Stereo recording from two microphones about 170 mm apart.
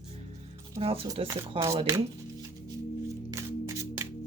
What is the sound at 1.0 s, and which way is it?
Speech, 20° right (ahead or behind).